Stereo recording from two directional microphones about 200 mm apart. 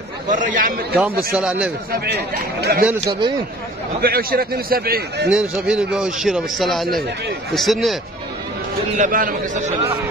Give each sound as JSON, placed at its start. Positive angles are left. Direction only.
{"t": 0.3, "sound": "a man's voice", "side_deg": -40}
{"t": 1.3, "sound": "a man's voice", "side_deg": -5}
{"t": 1.9, "sound": "a man's voice", "side_deg": -55}
{"t": 2.9, "sound": "a man's voice", "side_deg": -20}
{"t": 4.0, "sound": "a man's voice", "side_deg": -50}
{"t": 5.7, "sound": "a man's voice", "side_deg": -5}
{"t": 8.9, "sound": "a man's voice", "side_deg": -40}